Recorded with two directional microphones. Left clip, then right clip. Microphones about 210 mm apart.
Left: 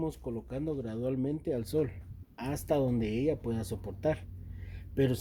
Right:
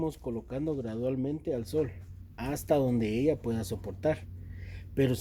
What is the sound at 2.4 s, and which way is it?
Speech, centre (ahead or behind).